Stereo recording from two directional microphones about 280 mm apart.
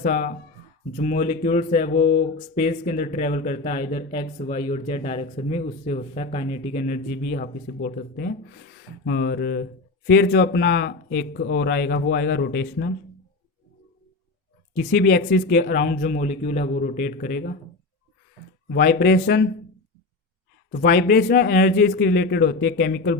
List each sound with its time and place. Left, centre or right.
0.0 s speech: left
14.8 s speech: left
18.7 s speech: left
20.7 s speech: left